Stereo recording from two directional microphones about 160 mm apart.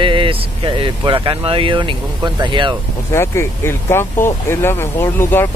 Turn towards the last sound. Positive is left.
turn(degrees=15)  # may be behind; listen again after turning